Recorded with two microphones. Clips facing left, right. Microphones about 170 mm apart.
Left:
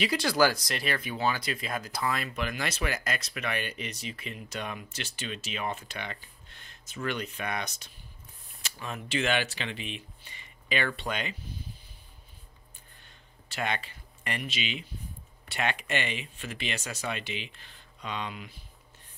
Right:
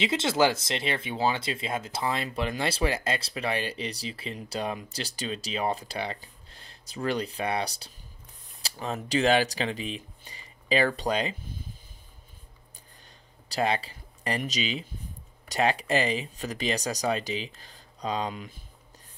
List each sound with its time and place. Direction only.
0.0 s speech: 25° right (ahead or behind)
13.5 s speech: 35° right (ahead or behind)